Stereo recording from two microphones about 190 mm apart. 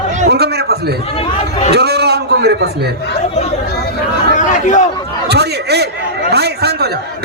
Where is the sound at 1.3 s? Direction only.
35° left (ahead or behind).